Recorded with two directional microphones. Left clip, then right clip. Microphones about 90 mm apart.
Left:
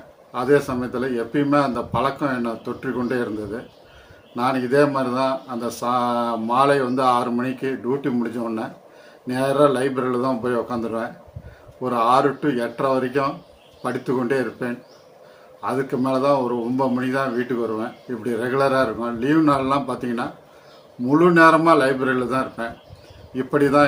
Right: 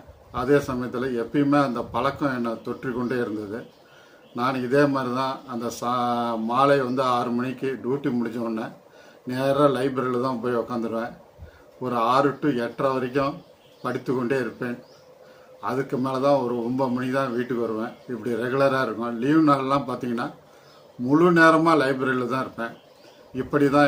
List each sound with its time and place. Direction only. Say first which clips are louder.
0.3 s a man's voice: left 3 dB; 20° right (ahead or behind)